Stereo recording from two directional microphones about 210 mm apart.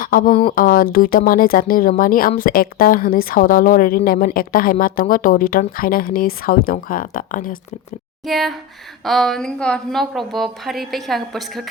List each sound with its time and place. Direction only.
0.0 s speech: 40° left (ahead or behind)
8.3 s a woman's voice: centre (ahead or behind)